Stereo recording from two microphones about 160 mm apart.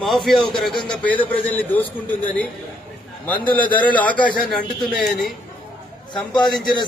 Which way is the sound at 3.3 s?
10° left (ahead or behind).